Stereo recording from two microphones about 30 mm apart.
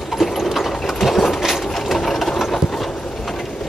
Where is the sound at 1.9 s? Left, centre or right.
Centre.